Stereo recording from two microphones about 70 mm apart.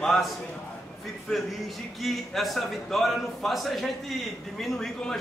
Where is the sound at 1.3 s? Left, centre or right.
Centre.